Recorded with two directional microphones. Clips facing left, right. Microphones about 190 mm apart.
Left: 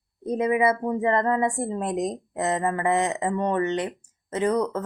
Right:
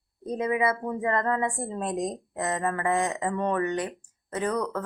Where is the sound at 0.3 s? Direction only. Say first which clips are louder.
Left 4 dB; 20° left (ahead or behind).